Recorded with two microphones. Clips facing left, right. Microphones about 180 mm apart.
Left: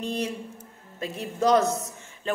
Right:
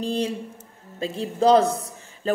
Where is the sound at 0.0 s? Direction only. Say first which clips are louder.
Right 4 dB; 30° right (ahead or behind).